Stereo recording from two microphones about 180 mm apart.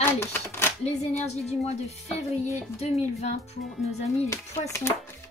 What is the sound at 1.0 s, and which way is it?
Speech, 40° left (ahead or behind).